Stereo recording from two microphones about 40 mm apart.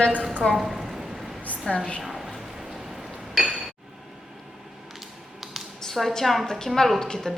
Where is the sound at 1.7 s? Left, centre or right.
Left.